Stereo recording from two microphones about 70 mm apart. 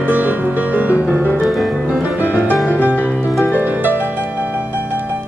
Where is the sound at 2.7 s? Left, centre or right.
Left.